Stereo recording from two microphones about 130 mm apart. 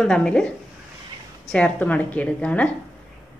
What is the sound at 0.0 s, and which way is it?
A woman's voice, 5° left (ahead or behind).